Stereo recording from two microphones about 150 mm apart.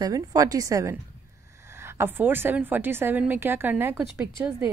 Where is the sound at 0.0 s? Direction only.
25° right (ahead or behind).